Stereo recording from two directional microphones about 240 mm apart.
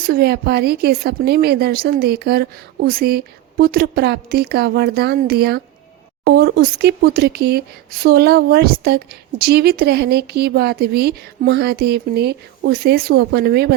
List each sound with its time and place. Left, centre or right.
0.0 s a woman's voice: right